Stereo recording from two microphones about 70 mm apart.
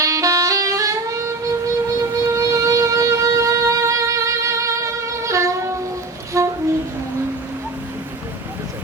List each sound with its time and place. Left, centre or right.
0.0 s saxophone: right
2.0 s music: right
6.3 s a sound: right